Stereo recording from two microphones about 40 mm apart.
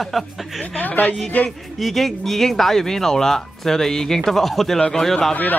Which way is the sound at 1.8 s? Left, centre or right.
Centre.